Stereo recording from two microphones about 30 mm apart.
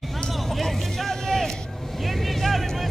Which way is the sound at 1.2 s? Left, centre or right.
Centre.